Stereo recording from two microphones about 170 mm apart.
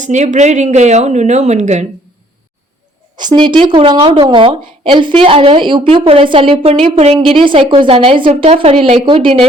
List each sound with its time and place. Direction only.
0.0 s a woman's voice: 45° right (ahead or behind)
3.2 s a woman's voice: 25° right (ahead or behind)